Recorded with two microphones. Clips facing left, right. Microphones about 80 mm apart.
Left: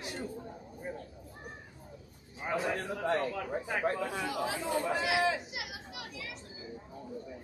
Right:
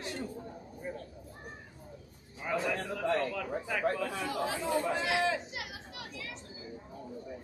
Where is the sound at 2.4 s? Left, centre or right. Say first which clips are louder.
Even; left.